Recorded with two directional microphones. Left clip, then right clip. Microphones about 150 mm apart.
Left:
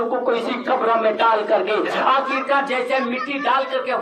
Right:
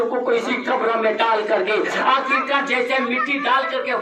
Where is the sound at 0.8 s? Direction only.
30° right (ahead or behind).